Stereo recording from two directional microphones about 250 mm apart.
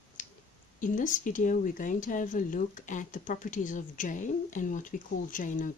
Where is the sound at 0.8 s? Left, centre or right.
Left.